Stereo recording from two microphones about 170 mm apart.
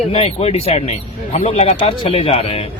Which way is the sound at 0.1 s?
35° left (ahead or behind).